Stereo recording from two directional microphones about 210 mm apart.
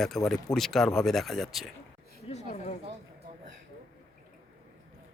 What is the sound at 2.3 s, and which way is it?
Chatter, 30° left (ahead or behind).